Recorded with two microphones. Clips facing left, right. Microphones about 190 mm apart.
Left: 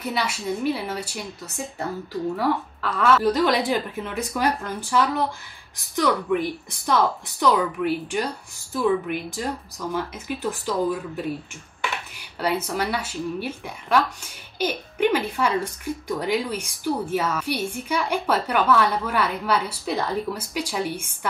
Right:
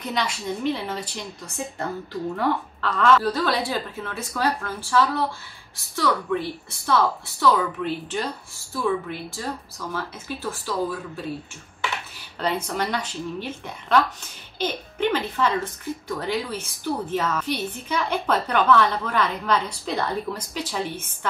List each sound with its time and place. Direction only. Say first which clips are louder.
0.0 s a woman's voice: left 1 dB; 5° left (ahead or behind)
12.4 s a woman's voice: left 1 dB; 10° left (ahead or behind)